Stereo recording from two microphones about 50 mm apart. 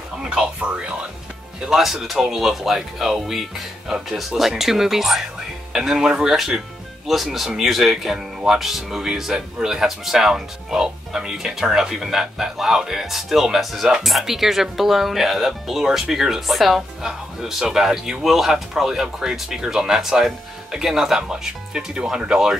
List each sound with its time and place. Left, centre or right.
0.2 s speech: centre
1.7 s speech: centre